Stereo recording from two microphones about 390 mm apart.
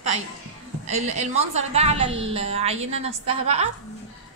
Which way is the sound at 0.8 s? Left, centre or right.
Centre.